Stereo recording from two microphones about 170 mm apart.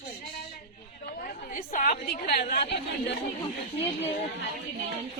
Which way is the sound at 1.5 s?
50° left (ahead or behind).